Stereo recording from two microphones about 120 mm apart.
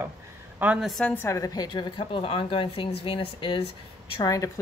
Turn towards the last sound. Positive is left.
turn(degrees=25)  # may be behind; listen again after turning